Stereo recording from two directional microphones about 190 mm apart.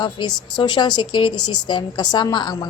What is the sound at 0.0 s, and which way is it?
A woman's voice, 25° left (ahead or behind).